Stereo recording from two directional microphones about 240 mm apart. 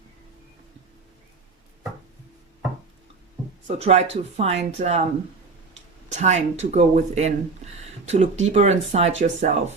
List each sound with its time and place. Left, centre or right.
3.8 s speech: right
6.1 s speech: right